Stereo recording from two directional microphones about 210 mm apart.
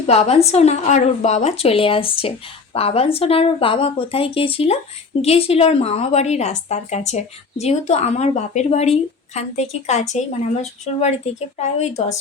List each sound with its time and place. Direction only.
0.0 s a woman's voice: 30° left (ahead or behind)